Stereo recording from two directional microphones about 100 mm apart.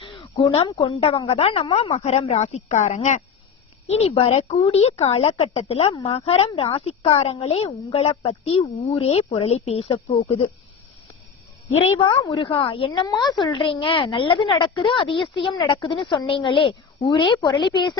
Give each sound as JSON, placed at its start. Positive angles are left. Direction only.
{"t": 0.0, "sound": "a sound", "side_deg": 60}
{"t": 0.8, "sound": "speech", "side_deg": 80}
{"t": 1.7, "sound": "speech", "side_deg": 90}
{"t": 3.8, "sound": "speech", "side_deg": 90}
{"t": 7.2, "sound": "speech", "side_deg": 90}
{"t": 11.9, "sound": "a woman's voice", "side_deg": 50}